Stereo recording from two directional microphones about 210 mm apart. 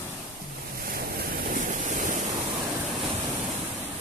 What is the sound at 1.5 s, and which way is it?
Vehicle, 40° right (ahead or behind).